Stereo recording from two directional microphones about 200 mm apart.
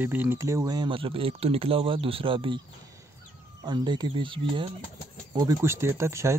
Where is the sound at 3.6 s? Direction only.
20° right (ahead or behind).